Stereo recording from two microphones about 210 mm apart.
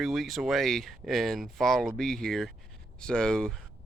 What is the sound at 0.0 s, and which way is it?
Speech, centre (ahead or behind).